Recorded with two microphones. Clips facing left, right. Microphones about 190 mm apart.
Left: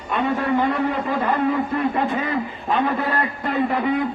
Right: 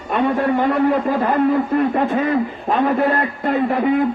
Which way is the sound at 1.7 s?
50° right (ahead or behind).